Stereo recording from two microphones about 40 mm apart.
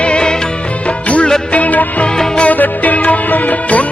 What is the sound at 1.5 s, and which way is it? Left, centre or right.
Music, left.